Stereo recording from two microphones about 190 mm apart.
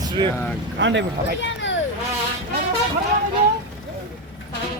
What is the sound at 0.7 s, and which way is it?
Speech, 70° right (ahead or behind).